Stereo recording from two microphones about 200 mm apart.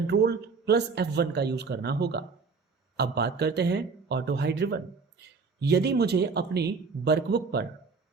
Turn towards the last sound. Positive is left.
turn(degrees=-55)  # may be behind; listen again after turning